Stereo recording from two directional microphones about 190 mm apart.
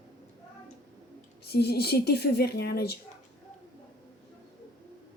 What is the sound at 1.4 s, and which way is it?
Speech, 55° left (ahead or behind).